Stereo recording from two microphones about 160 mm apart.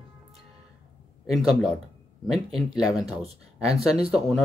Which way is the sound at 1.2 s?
Centre (ahead or behind).